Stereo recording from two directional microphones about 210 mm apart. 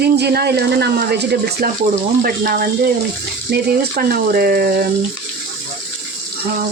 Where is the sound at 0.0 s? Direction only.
50° right (ahead or behind).